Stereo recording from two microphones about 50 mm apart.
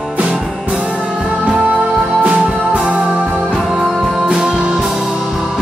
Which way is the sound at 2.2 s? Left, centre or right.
Right.